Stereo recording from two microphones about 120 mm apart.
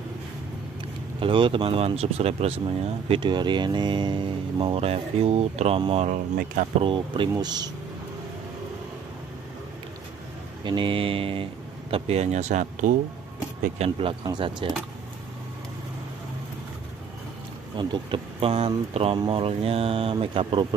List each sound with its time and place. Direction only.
1.2 s speech: 45° right (ahead or behind)
6.0 s speech: 90° right
6.8 s speech: 45° right (ahead or behind)
10.6 s speech: 40° right (ahead or behind)
11.9 s speech: 60° right (ahead or behind); by 12.9 s 85° right
13.7 s speech: 50° right (ahead or behind)
17.7 s speech: 40° right (ahead or behind)